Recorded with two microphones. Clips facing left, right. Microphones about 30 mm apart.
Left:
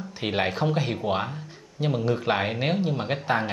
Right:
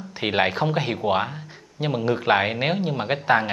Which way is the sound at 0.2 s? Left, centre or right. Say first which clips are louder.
Right 4 dB; centre.